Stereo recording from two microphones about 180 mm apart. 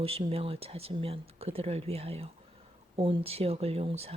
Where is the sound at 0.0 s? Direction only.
35° right (ahead or behind).